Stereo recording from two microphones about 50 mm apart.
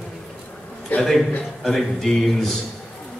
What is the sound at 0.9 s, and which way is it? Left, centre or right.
Speech, left.